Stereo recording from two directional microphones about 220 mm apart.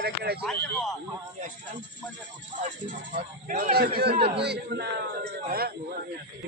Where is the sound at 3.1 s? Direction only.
40° right (ahead or behind).